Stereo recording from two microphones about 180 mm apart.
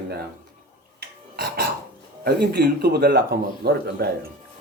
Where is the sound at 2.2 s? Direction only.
60° right (ahead or behind).